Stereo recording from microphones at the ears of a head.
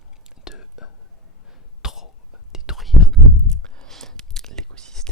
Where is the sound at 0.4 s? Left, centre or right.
Left.